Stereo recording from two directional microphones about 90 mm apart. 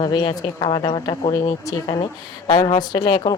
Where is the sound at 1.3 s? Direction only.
40° left (ahead or behind).